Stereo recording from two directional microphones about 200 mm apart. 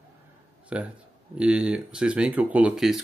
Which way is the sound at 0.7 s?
5° right (ahead or behind).